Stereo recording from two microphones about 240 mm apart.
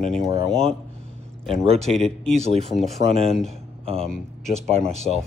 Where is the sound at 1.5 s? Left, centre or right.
Right.